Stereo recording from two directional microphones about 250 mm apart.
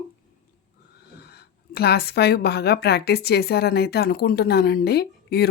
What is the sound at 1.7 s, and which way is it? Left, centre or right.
A woman's voice, left.